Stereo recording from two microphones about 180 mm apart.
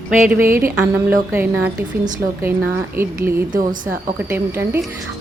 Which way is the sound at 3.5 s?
50° right (ahead or behind).